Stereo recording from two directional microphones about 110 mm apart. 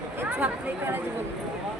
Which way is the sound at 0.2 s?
20° right (ahead or behind).